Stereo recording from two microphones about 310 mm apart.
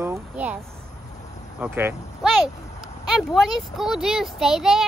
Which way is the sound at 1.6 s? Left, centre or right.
Centre.